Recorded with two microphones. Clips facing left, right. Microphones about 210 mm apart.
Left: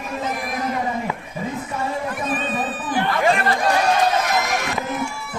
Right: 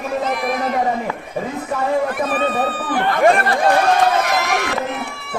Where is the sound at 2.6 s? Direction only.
55° right (ahead or behind).